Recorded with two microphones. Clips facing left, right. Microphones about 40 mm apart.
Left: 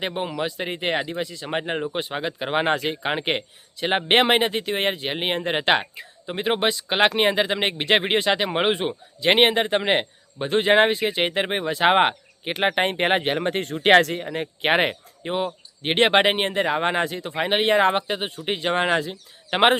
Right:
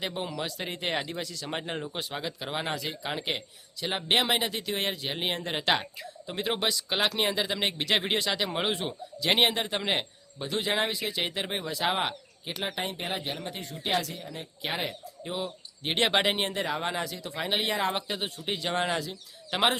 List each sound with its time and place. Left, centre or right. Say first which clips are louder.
0.0 s speech: left 7 dB; left
15.8 s speech: left 8 dB; left